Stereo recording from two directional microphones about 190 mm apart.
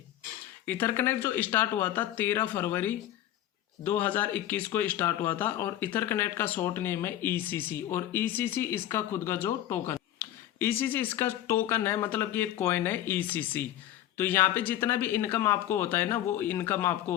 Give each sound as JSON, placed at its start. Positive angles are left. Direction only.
{"t": 0.7, "sound": "speech", "side_deg": 10}